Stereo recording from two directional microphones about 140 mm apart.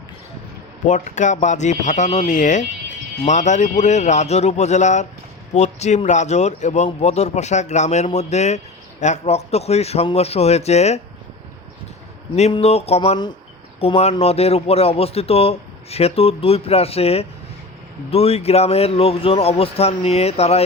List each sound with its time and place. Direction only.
0.9 s a man's voice: 60° left (ahead or behind)
12.4 s a man's voice: 45° left (ahead or behind)